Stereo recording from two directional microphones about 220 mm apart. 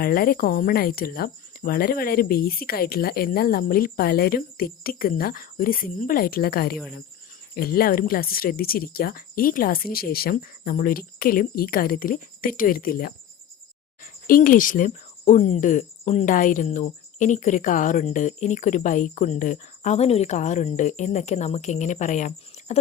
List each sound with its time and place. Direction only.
0.0 s speech: 40° left (ahead or behind)